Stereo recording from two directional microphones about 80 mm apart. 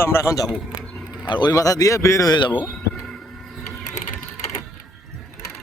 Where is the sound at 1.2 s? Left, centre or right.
Left.